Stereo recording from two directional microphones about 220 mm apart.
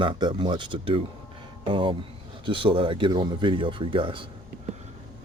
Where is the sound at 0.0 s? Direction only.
20° right (ahead or behind).